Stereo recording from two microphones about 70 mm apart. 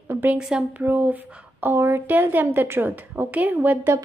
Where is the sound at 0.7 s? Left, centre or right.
Right.